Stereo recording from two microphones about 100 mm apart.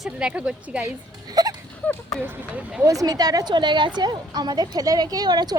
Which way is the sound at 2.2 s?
15° right (ahead or behind).